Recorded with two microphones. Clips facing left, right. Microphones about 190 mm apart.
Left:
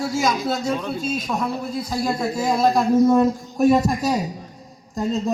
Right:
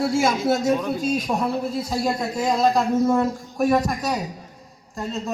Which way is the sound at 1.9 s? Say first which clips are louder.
Left 3 dB; centre (ahead or behind).